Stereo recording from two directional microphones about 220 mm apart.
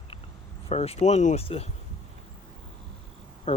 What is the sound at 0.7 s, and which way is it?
Speech, 30° left (ahead or behind).